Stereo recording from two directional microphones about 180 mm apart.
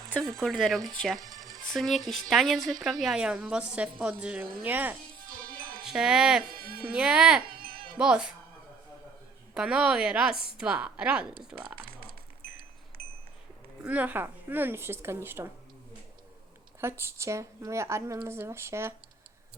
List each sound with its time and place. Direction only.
0.0 s a sound: centre (ahead or behind)
0.4 s a woman's voice: centre (ahead or behind)
5.3 s music: 50° right (ahead or behind)
5.8 s speech: 5° right (ahead or behind)
6.5 s speech: 55° right (ahead or behind)
6.9 s a woman's voice: 5° right (ahead or behind)
7.6 s music: 55° right (ahead or behind)
7.9 s a woman's voice: 5° right (ahead or behind)
9.6 s a woman's voice: 5° right (ahead or behind)
13.8 s speech: 10° right (ahead or behind)
17.0 s speech: 15° right (ahead or behind)